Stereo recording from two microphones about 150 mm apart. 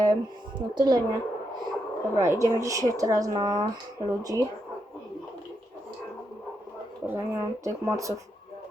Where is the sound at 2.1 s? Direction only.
20° right (ahead or behind).